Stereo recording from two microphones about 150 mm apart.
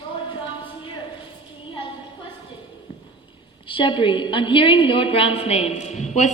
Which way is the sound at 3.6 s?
35° left (ahead or behind).